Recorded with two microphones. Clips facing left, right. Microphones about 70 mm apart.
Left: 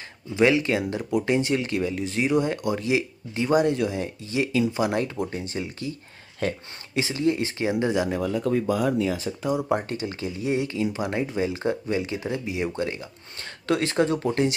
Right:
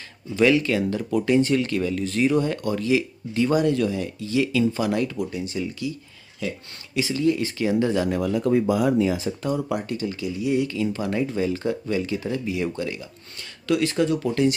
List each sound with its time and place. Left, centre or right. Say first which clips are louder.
0.4 s speech: right 1 dB; left
7.8 s speech: even; centre
8.1 s speech: right 3 dB; centre
9.6 s speech: left 1 dB; left